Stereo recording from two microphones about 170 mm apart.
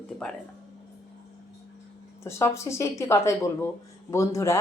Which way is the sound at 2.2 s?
15° left (ahead or behind).